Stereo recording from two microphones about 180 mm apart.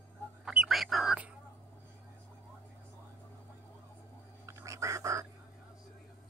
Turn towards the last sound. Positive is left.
turn(degrees=-15)  # may be behind; listen again after turning